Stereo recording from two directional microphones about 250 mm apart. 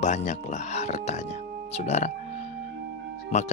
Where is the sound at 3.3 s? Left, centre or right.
Left.